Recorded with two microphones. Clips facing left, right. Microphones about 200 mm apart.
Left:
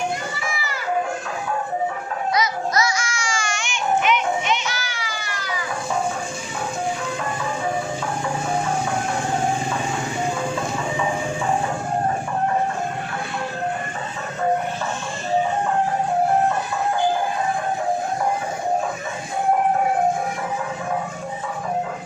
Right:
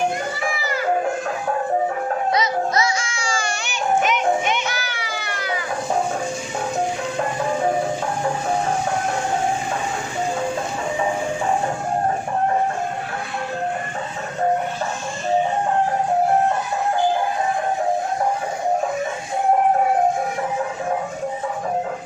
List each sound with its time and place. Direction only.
2.3 s music: 30° right (ahead or behind); by 5.5 s 60° right (ahead or behind)